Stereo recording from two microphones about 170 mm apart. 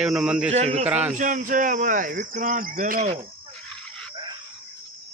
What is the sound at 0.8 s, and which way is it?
Speech, 10° right (ahead or behind).